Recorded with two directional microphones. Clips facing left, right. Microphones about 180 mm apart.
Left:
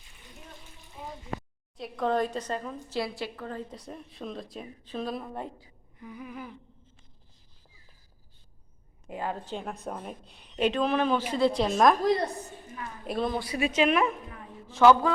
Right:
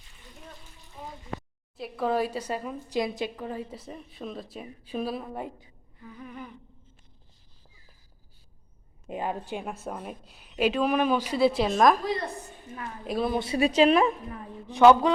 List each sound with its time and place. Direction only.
1.0 s a sound: 5° left (ahead or behind)
1.7 s a woman's voice: 5° right (ahead or behind)
6.0 s humming: 10° left (ahead or behind)
9.0 s a woman's voice: 20° right (ahead or behind); by 11.9 s centre (ahead or behind)
13.1 s a woman's voice: centre (ahead or behind)
13.4 s speech: 30° right (ahead or behind)
14.7 s a woman's voice: 15° right (ahead or behind)